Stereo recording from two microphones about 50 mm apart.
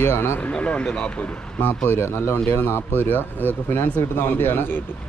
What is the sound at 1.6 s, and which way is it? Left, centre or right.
Speech, left.